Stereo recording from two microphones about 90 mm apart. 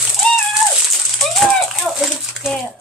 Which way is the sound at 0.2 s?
15° left (ahead or behind).